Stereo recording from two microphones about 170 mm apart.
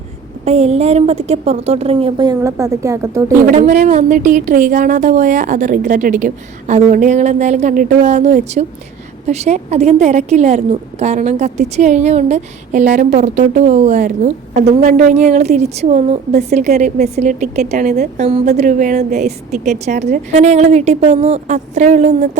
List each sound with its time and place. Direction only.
0.4 s a woman's voice: 40° right (ahead or behind); by 3.3 s 20° right (ahead or behind)
3.4 s a woman's voice: 45° right (ahead or behind)